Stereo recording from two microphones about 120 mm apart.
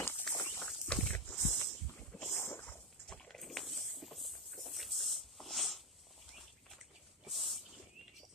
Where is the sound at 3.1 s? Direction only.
5° left (ahead or behind).